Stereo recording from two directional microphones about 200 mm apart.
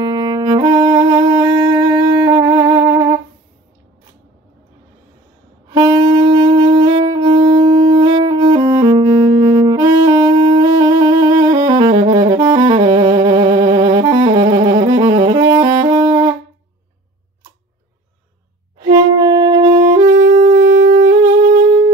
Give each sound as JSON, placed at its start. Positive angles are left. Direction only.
{"t": 0.0, "sound": "music", "side_deg": -20}
{"t": 5.7, "sound": "wind instrument", "side_deg": -20}
{"t": 7.3, "sound": "shofar", "side_deg": -25}
{"t": 8.2, "sound": "saxophone", "side_deg": -20}
{"t": 18.8, "sound": "saxophone", "side_deg": -20}
{"t": 20.6, "sound": "music", "side_deg": -45}